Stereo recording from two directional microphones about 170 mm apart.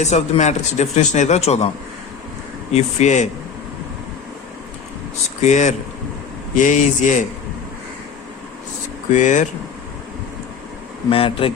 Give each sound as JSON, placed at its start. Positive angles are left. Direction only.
{"t": 0.0, "sound": "a man's voice", "side_deg": 40}
{"t": 2.7, "sound": "speech", "side_deg": 45}
{"t": 5.4, "sound": "speech", "side_deg": 45}
{"t": 9.1, "sound": "speech", "side_deg": 45}
{"t": 11.1, "sound": "a man's voice", "side_deg": 30}